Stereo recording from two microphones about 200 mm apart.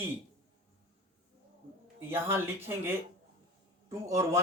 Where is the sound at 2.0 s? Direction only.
10° right (ahead or behind).